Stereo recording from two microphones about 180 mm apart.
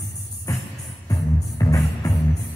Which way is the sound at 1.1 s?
20° left (ahead or behind).